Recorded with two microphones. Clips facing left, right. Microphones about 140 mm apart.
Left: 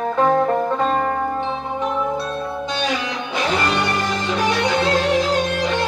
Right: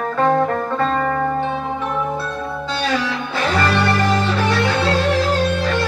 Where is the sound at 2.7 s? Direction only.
15° left (ahead or behind).